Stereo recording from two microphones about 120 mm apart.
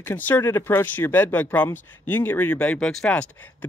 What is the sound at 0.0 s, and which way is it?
Speech, 15° left (ahead or behind).